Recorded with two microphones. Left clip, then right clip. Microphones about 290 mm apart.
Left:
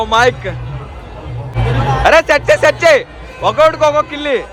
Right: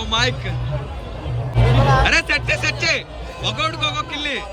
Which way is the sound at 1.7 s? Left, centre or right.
Centre.